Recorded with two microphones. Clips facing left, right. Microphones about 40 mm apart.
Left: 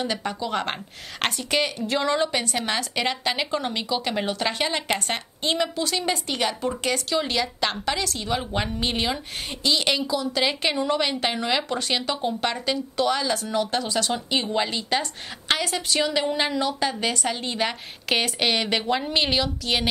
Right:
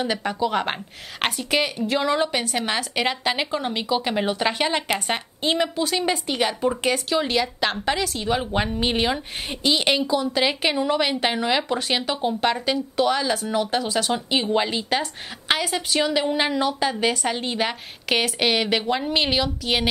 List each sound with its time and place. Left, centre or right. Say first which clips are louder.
0.0 s speech: right 4 dB; centre
10.4 s speech: right 2 dB; centre